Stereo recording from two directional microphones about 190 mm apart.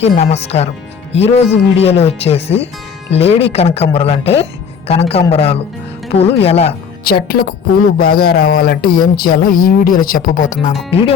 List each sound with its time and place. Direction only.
0.0 s speech: 35° left (ahead or behind)
7.0 s speech: 55° left (ahead or behind)